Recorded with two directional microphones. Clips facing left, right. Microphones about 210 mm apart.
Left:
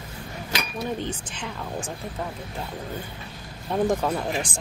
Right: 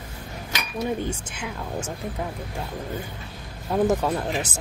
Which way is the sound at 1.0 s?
10° right (ahead or behind).